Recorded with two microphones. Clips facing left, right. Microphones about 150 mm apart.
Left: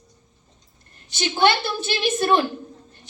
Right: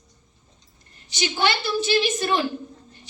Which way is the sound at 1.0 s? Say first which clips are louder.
Left 4 dB; 55° left (ahead or behind).